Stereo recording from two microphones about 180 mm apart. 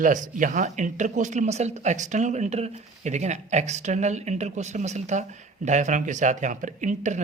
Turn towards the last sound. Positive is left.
turn(degrees=-40)  # may be behind; listen again after turning